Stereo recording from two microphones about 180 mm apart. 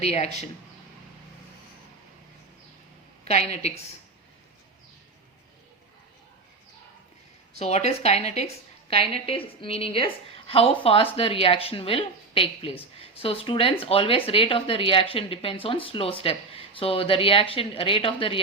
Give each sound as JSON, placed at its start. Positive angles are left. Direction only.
{"t": 0.0, "sound": "speech", "side_deg": 35}
{"t": 3.2, "sound": "speech", "side_deg": 35}
{"t": 7.6, "sound": "speech", "side_deg": 35}